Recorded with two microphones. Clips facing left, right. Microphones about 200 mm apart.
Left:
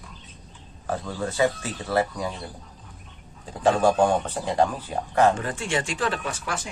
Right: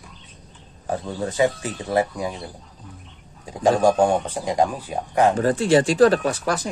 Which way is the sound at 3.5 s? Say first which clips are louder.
Right 3 dB; 15° right (ahead or behind).